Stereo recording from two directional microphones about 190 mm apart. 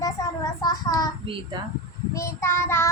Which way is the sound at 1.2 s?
25° right (ahead or behind).